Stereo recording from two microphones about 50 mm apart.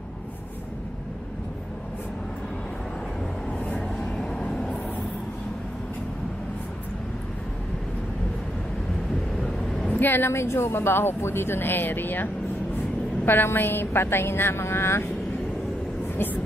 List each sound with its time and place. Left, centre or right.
3.5 s vehicle: left
9.4 s vehicle: centre
9.8 s a woman's voice: left